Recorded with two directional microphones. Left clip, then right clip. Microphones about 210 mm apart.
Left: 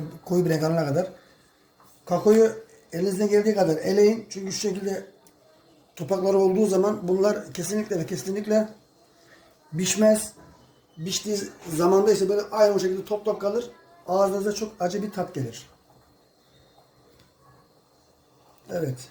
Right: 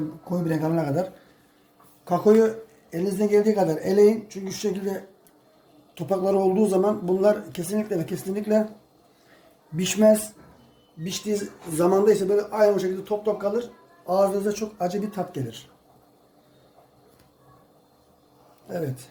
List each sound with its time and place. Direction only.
0.3 s speech: 25° left (ahead or behind)
0.9 s speech: centre (ahead or behind)
9.7 s speech: 10° right (ahead or behind)